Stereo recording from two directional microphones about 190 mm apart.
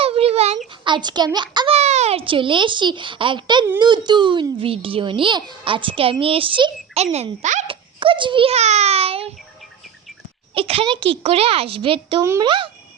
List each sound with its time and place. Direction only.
0.0 s a sound: 30° right (ahead or behind)
0.9 s a child's voice: 25° right (ahead or behind)
7.9 s a child's voice: 25° right (ahead or behind)
10.5 s a child's voice: 30° right (ahead or behind)